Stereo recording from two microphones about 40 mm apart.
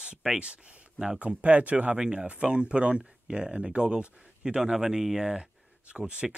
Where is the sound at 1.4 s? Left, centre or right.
Right.